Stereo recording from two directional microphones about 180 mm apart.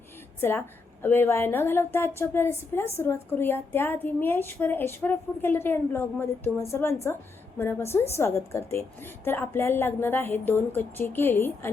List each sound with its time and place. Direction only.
0.3 s a woman's voice: 10° left (ahead or behind)